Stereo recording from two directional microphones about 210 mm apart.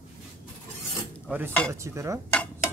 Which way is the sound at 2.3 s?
5° left (ahead or behind).